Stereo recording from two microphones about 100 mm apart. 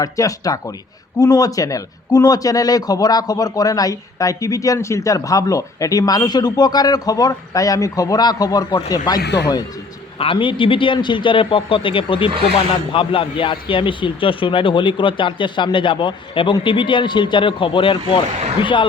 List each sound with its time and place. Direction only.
0.0 s speech: 35° left (ahead or behind)
10.2 s speech: 60° left (ahead or behind)